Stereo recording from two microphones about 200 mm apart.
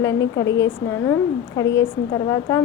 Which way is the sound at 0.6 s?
15° left (ahead or behind).